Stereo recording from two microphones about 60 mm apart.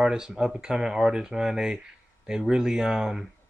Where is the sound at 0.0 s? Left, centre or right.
Centre.